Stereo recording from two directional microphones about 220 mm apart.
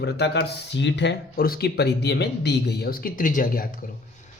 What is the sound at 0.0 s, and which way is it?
A man's voice, 50° left (ahead or behind).